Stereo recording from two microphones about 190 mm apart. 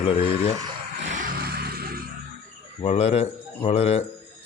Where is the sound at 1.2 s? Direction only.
55° right (ahead or behind).